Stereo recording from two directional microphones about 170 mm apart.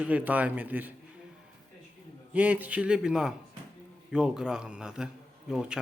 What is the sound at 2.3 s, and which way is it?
A man's voice, 10° right (ahead or behind).